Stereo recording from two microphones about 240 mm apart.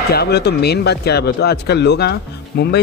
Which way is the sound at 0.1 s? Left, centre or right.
Left.